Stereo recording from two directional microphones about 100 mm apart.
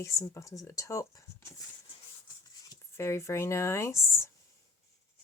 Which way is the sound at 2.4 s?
40° left (ahead or behind).